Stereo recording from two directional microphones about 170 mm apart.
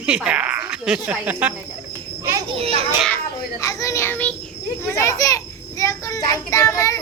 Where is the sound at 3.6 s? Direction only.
20° left (ahead or behind).